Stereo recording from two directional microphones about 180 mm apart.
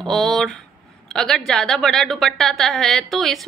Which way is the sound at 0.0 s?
Centre (ahead or behind).